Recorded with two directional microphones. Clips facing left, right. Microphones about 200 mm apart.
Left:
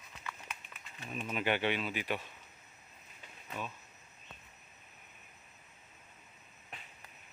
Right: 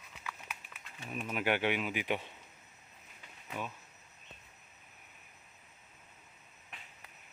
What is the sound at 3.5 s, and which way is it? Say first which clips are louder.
Speech: right 1 dB; 10° right (ahead or behind).